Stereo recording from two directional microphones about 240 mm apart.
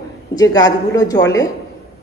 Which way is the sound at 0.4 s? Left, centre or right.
Centre.